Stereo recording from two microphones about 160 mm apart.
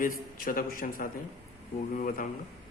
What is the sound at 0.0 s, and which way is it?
A man's voice, 65° left (ahead or behind).